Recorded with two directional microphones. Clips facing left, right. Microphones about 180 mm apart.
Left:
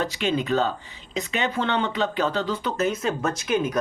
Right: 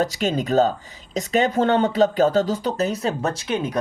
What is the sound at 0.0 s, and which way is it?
Speech, 40° right (ahead or behind).